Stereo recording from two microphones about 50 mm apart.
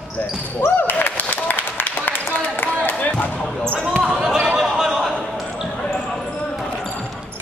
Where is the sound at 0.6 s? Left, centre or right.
Left.